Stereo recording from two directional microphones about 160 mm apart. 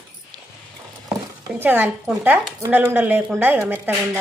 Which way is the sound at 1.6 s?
10° right (ahead or behind).